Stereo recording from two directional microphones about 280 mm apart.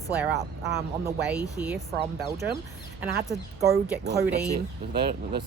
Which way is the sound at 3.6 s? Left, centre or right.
Centre.